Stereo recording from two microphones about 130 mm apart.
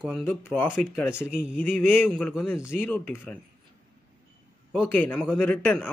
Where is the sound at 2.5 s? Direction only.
20° left (ahead or behind).